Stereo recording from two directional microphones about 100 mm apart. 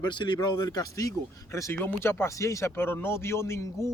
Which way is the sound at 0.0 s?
50° left (ahead or behind).